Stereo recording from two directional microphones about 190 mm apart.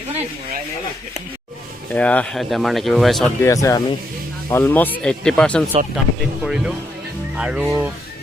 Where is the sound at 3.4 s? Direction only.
15° left (ahead or behind); by 7.6 s 5° right (ahead or behind).